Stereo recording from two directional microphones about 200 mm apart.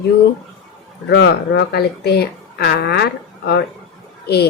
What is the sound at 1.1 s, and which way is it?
Speech, 55° left (ahead or behind).